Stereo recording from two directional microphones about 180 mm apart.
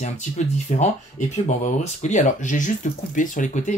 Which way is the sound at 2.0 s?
40° left (ahead or behind).